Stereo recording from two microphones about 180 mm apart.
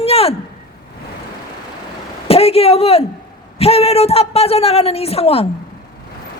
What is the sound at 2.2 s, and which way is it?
A woman's voice, 35° left (ahead or behind).